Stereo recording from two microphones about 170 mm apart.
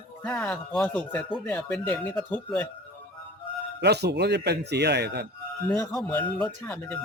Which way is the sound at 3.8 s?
80° right.